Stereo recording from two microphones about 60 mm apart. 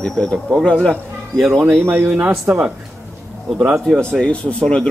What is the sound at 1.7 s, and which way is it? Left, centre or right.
Speech, right.